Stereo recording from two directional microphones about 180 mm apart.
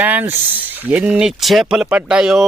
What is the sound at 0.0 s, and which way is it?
Speech, 10° right (ahead or behind).